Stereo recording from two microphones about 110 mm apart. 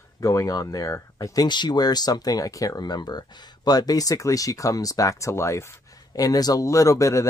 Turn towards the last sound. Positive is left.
turn(degrees=30)  # may be behind; listen again after turning